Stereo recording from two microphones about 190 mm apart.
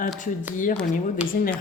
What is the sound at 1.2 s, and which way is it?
Speech, 5° right (ahead or behind).